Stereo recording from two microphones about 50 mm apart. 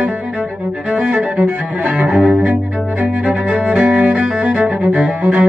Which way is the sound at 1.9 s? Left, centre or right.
Centre.